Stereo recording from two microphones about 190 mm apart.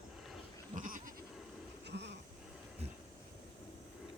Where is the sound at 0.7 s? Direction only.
45° right (ahead or behind).